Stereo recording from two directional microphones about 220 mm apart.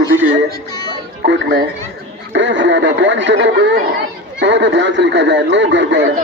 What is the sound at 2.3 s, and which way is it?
Speech, 55° right (ahead or behind).